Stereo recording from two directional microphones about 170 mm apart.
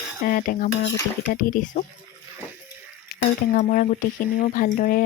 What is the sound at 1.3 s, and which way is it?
Speech, 55° left (ahead or behind).